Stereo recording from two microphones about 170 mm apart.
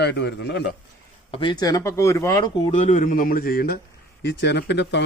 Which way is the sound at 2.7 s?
45° left (ahead or behind).